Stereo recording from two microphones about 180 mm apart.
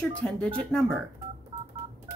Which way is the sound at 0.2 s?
5° left (ahead or behind).